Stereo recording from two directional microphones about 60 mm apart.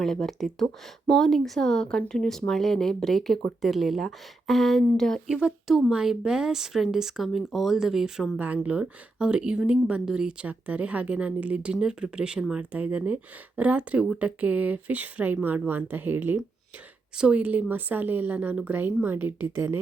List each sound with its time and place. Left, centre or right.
0.0 s speech: centre
5.3 s speech: centre
12.7 s speech: right
17.2 s a woman's voice: right